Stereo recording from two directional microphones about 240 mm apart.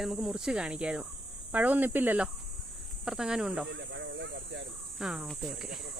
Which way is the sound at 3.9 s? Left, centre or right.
Right.